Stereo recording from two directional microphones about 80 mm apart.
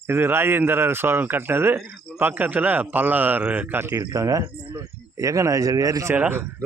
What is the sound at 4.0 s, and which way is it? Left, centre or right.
Speech, right.